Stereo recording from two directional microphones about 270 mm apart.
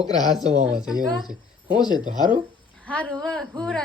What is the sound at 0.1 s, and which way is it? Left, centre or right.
Speech, centre.